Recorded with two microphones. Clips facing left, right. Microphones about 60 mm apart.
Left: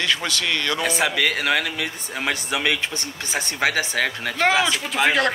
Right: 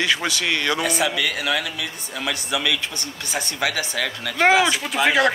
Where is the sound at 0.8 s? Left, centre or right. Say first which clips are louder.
Left 1 dB; left.